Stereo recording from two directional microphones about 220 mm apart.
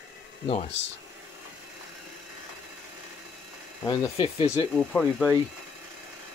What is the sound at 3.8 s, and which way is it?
Speech, 15° left (ahead or behind).